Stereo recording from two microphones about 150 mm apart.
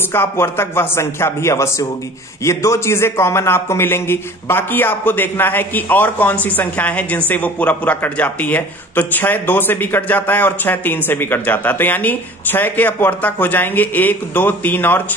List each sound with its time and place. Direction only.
0.1 s a man's voice: 15° left (ahead or behind)